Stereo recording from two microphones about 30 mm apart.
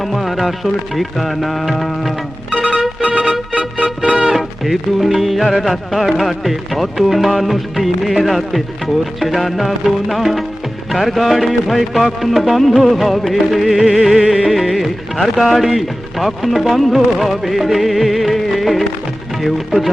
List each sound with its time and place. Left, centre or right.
0.0 s speech: centre
2.5 s music: right
3.8 s music: right
4.3 s speech: centre